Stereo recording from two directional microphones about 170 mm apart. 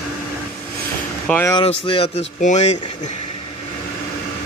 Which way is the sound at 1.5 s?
30° left (ahead or behind).